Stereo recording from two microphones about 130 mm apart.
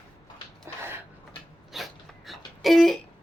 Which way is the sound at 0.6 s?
20° right (ahead or behind).